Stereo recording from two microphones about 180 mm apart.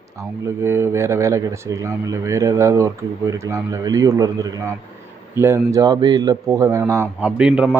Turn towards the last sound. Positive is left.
turn(degrees=-5)  # may be behind; listen again after turning